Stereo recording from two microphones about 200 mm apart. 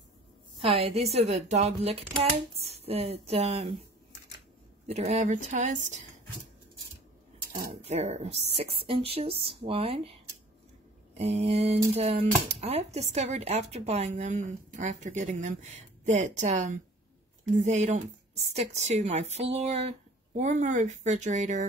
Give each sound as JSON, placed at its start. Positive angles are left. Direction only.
{"t": 0.6, "sound": "a woman's voice", "side_deg": -30}
{"t": 4.8, "sound": "speech", "side_deg": -35}
{"t": 7.9, "sound": "speech", "side_deg": -35}
{"t": 11.1, "sound": "speech", "side_deg": -30}